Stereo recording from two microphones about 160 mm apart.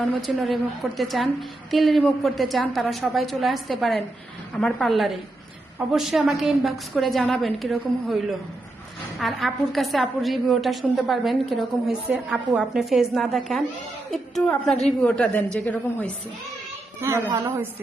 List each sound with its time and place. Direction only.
0.0 s a woman's voice: centre (ahead or behind)
17.0 s a woman's voice: 15° right (ahead or behind)